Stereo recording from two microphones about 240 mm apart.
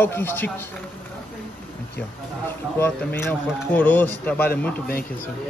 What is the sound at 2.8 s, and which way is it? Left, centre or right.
Speech, centre.